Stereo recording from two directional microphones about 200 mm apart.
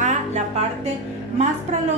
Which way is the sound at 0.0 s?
35° right (ahead or behind).